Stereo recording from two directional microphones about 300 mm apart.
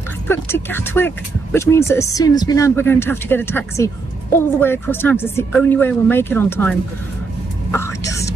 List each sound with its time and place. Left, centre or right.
0.3 s speech: centre
7.7 s whispering: centre